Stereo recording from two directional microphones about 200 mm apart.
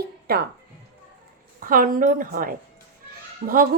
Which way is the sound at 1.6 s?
45° right (ahead or behind).